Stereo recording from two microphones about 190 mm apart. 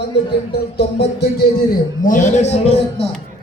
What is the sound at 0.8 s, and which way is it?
Music, 60° left (ahead or behind).